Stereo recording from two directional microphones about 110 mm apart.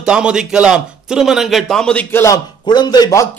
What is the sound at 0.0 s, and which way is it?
A man's voice, 10° right (ahead or behind).